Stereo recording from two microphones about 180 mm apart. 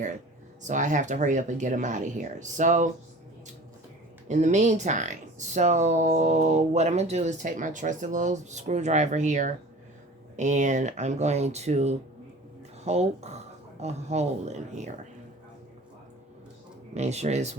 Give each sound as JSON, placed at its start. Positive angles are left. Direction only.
{"t": 0.6, "sound": "speech", "side_deg": -45}
{"t": 4.3, "sound": "speech", "side_deg": -40}
{"t": 16.9, "sound": "speech", "side_deg": -40}